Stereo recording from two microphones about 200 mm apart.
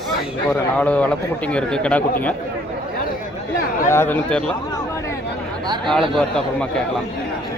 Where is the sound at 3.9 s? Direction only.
10° left (ahead or behind).